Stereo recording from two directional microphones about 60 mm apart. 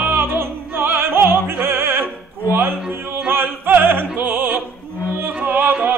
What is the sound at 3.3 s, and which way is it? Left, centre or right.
Opera, right.